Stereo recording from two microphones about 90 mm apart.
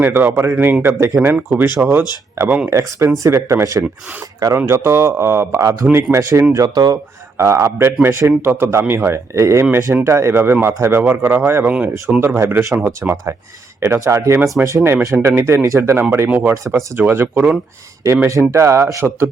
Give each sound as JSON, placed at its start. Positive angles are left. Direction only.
{"t": 0.0, "sound": "speech", "side_deg": -25}
{"t": 6.5, "sound": "speech", "side_deg": -45}
{"t": 7.3, "sound": "speech", "side_deg": -30}
{"t": 16.7, "sound": "speech", "side_deg": -10}
{"t": 18.3, "sound": "speech", "side_deg": -30}